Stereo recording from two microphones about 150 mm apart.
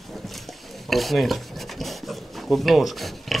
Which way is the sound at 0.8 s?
Centre (ahead or behind).